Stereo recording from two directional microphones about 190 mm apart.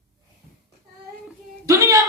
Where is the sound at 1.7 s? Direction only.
15° right (ahead or behind).